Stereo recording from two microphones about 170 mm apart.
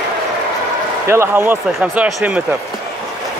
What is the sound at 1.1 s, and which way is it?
Speech, 15° right (ahead or behind).